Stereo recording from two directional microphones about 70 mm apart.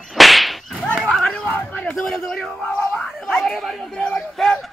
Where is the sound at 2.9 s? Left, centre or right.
Centre.